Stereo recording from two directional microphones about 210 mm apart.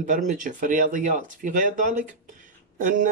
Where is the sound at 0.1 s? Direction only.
35° right (ahead or behind).